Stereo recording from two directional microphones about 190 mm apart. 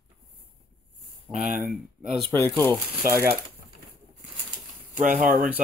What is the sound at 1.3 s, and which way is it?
Speech, 40° right (ahead or behind).